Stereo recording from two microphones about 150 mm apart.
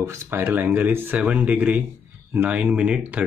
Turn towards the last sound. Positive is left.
turn(degrees=-10)  # may be behind; listen again after turning